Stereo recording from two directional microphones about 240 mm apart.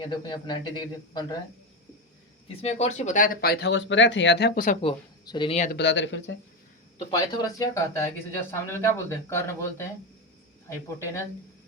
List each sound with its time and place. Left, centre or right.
0.0 s speech: centre
2.5 s speech: left
5.7 s speech: left
7.1 s speech: centre